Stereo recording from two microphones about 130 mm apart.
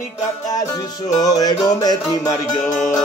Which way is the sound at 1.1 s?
30° left (ahead or behind).